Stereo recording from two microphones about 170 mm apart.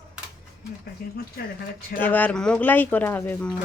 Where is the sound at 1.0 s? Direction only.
65° left (ahead or behind).